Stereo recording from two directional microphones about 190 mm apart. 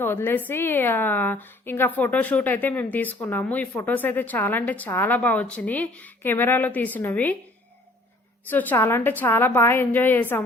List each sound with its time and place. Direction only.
0.0 s a woman's voice: 10° left (ahead or behind)
8.4 s a woman's voice: 10° left (ahead or behind)